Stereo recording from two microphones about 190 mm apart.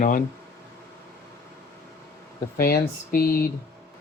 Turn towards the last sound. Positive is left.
turn(degrees=50)  # may be behind; listen again after turning